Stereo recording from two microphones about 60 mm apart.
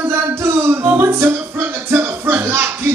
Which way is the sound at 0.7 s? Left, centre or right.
Right.